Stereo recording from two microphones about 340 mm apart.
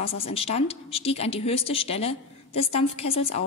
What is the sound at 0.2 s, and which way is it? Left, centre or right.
A woman's voice, centre.